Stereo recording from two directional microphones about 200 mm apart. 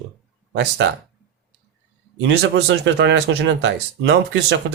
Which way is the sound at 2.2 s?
60° right (ahead or behind).